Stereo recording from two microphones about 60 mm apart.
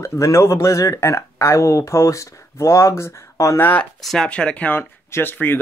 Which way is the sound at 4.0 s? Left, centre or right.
Centre.